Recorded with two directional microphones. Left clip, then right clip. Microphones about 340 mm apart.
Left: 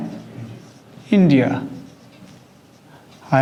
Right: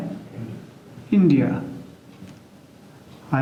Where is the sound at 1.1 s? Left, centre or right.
Left.